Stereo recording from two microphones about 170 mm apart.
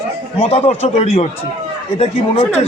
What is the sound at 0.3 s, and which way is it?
Speech, 35° left (ahead or behind).